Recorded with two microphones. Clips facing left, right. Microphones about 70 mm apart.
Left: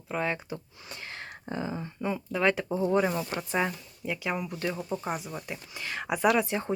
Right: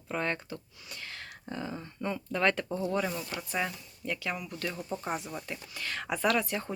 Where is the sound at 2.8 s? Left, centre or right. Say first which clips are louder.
Left 9 dB; left.